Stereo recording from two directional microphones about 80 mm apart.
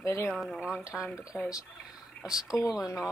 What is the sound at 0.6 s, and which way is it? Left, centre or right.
Speech, centre.